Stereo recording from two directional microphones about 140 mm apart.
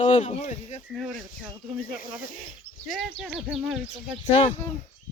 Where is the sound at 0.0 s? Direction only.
55° left (ahead or behind).